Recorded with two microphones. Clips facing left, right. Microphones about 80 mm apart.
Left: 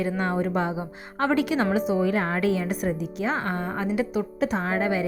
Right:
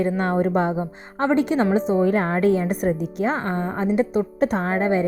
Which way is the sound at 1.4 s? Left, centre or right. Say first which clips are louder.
Right 4 dB; right.